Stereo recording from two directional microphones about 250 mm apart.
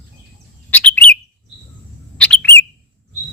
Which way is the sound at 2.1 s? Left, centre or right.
Centre.